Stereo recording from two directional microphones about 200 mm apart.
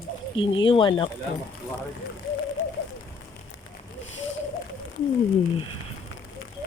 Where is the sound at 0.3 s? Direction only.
25° left (ahead or behind).